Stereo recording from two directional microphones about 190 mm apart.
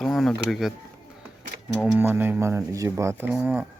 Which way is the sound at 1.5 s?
55° right (ahead or behind).